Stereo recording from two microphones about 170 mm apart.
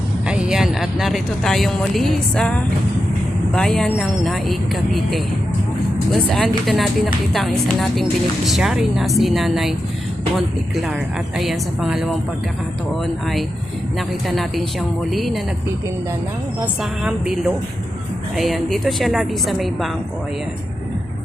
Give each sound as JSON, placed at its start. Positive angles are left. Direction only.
{"t": 0.3, "sound": "speech", "side_deg": -5}
{"t": 14.3, "sound": "speech", "side_deg": 0}
{"t": 17.0, "sound": "speech", "side_deg": -5}